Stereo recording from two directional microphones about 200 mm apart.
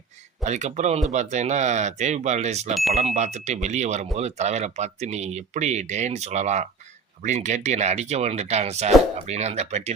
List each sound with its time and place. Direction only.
0.4 s speech: 35° right (ahead or behind)